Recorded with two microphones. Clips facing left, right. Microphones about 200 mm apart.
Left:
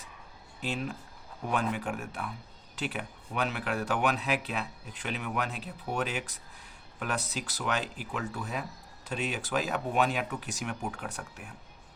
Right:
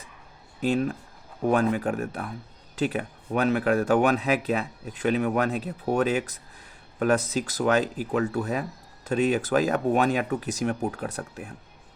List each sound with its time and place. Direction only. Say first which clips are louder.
0.6 s speech: right 10 dB; 45° right (ahead or behind)
7.3 s speech: right 10 dB; 45° right (ahead or behind)